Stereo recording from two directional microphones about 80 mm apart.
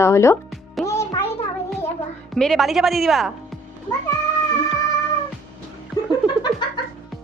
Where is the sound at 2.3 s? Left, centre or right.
Centre.